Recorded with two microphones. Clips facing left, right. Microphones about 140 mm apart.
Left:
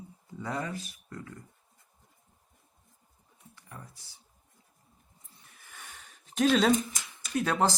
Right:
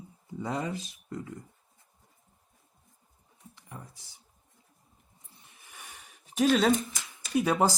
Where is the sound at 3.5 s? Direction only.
20° right (ahead or behind).